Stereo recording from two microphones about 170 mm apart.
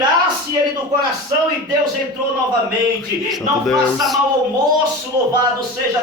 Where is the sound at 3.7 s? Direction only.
Centre (ahead or behind).